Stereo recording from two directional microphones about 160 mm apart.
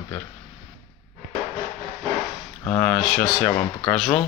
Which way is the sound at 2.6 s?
10° left (ahead or behind).